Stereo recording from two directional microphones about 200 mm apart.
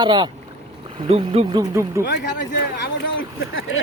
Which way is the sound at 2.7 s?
65° left (ahead or behind).